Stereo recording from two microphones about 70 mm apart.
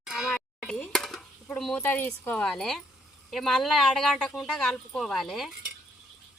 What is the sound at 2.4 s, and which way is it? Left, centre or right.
Speech, centre.